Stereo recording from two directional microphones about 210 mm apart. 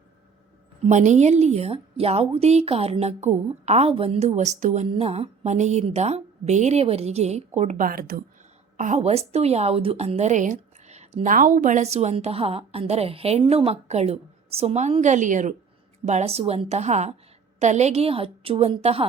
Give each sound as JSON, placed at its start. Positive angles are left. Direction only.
{"t": 0.9, "sound": "a woman's voice", "side_deg": -35}
{"t": 8.8, "sound": "a woman's voice", "side_deg": -35}